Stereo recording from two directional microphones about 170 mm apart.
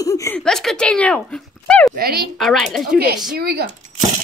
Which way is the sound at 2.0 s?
65° right (ahead or behind).